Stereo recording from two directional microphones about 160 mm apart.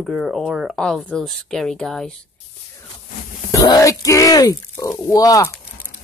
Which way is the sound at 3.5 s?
20° left (ahead or behind).